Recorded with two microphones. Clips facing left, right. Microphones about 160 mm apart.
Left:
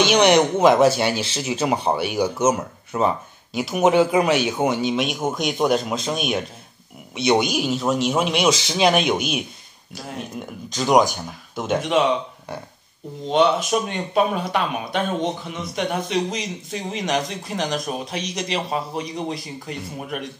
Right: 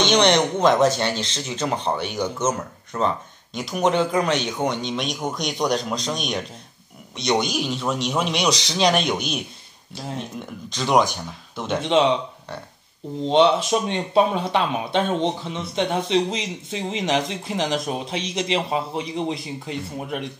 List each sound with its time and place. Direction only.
0.0 s speech: 10° left (ahead or behind)
10.7 s speech: 5° left (ahead or behind)
13.3 s speech: 25° right (ahead or behind)